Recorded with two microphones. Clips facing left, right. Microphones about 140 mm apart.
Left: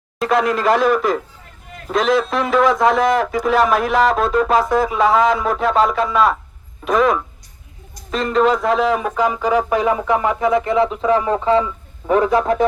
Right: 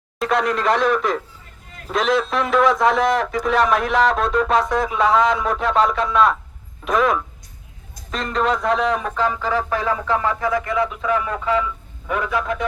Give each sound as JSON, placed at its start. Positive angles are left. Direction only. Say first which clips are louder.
{"t": 0.2, "sound": "a man's voice", "louder": "left 3 dB", "side_deg": 0}